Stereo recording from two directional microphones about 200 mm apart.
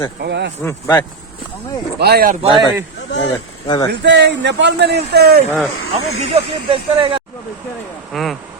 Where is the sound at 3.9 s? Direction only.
60° right (ahead or behind).